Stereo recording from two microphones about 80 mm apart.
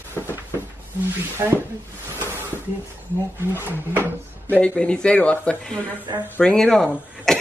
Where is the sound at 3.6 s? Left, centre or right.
Right.